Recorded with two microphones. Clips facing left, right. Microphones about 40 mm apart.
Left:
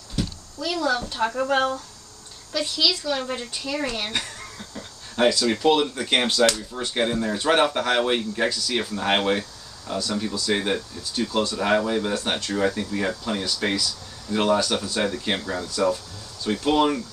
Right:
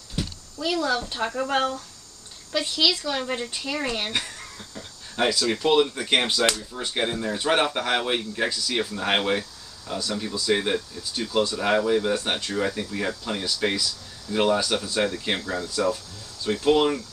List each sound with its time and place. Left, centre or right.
0.2 s a sound: centre
0.6 s speech: centre
2.5 s speech: centre
4.2 s speech: centre